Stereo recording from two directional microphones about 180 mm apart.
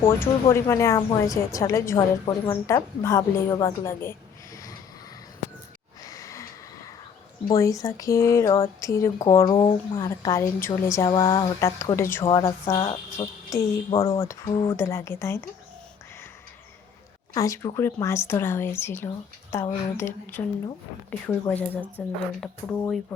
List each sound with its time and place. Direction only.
0.0 s speech: 15° left (ahead or behind)
6.0 s a sound: 20° left (ahead or behind)
7.4 s speech: 20° left (ahead or behind)
13.9 s speech: 30° left (ahead or behind)
14.2 s speech: 20° left (ahead or behind)
17.3 s speech: 20° left (ahead or behind)